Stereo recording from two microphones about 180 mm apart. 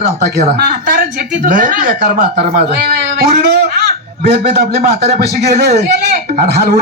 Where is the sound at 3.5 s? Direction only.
65° right (ahead or behind).